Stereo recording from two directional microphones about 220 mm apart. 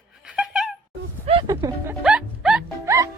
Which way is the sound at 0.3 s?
5° right (ahead or behind).